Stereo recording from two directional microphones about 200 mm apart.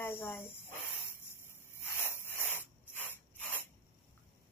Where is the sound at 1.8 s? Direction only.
10° left (ahead or behind).